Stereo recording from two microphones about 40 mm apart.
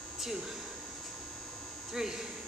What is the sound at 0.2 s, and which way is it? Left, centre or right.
Speech, centre.